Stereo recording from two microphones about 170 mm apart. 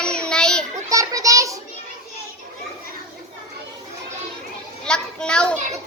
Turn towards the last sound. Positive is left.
turn(degrees=5)  # may be behind; listen again after turning